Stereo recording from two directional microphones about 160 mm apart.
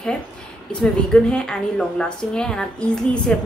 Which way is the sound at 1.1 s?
5° left (ahead or behind).